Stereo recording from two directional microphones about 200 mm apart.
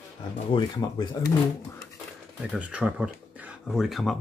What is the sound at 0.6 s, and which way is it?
Speech, 20° left (ahead or behind).